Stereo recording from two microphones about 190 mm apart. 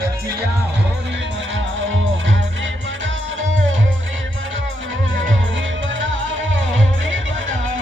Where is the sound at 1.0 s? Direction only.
65° right (ahead or behind).